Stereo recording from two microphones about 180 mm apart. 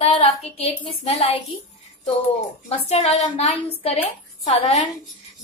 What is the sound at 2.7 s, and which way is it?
A woman's voice, 35° left (ahead or behind).